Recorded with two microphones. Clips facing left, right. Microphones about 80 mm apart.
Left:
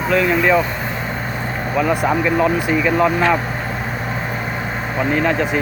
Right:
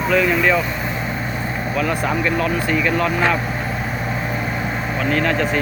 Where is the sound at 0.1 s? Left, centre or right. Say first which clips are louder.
Left 1 dB; centre.